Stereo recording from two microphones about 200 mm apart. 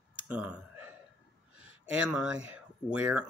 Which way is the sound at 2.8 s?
5° right (ahead or behind).